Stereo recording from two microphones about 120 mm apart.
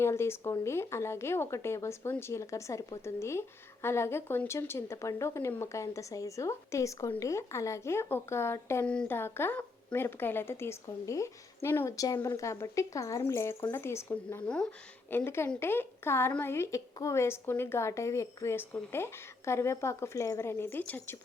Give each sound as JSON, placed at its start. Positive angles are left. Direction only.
{"t": 0.0, "sound": "speech", "side_deg": 20}
{"t": 14.4, "sound": "speech", "side_deg": 5}
{"t": 15.1, "sound": "speech", "side_deg": 20}